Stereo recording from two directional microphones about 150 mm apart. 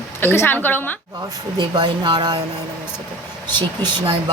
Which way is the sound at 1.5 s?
30° right (ahead or behind).